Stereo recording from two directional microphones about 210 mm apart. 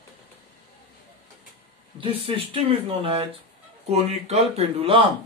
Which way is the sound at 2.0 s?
25° right (ahead or behind).